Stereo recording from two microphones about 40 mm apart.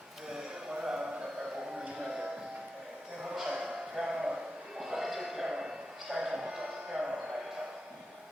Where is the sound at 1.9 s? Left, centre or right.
Centre.